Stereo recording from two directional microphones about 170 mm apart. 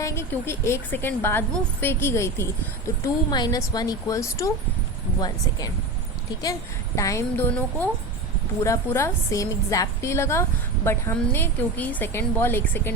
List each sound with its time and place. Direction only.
0.0 s a woman's voice: 15° left (ahead or behind)